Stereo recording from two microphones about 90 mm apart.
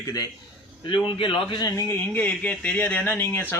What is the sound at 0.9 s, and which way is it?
Speech, 65° left (ahead or behind).